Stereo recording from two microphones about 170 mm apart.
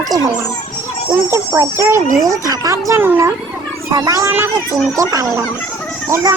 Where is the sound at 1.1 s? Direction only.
20° right (ahead or behind).